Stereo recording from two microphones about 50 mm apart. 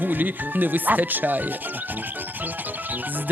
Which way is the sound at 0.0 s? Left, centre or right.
Right.